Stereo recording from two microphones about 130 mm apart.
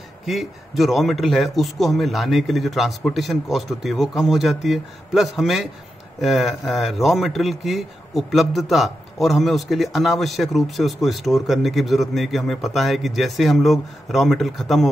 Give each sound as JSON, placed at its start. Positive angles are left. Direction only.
{"t": 0.3, "sound": "a man's voice", "side_deg": 0}